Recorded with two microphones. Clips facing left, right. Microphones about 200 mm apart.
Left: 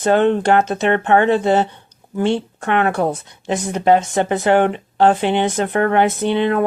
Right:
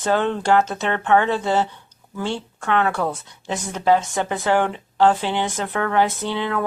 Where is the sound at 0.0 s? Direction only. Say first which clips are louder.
Left 6 dB; 60° left (ahead or behind).